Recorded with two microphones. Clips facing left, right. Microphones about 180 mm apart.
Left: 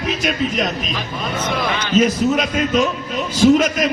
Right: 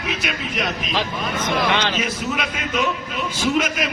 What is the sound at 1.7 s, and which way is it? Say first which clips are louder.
Speech: right 2 dB; 80° right.